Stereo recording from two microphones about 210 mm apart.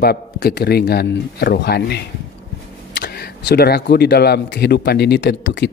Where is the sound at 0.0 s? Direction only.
50° left (ahead or behind).